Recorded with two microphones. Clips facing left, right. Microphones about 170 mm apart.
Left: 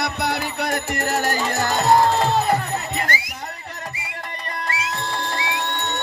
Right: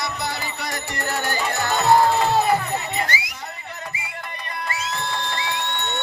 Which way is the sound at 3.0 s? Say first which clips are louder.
Left 1 dB; 50° left (ahead or behind).